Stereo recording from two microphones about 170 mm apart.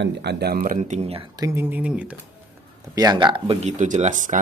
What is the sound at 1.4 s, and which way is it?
Speech, 15° right (ahead or behind).